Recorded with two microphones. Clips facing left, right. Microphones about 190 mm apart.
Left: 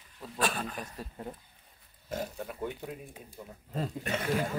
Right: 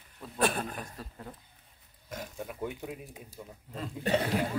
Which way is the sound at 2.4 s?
10° right (ahead or behind).